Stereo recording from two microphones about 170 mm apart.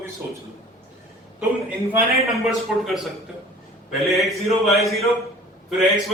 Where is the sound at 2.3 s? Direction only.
Centre (ahead or behind).